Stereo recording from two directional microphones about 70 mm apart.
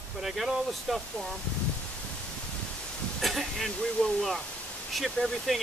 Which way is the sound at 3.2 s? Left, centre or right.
Centre.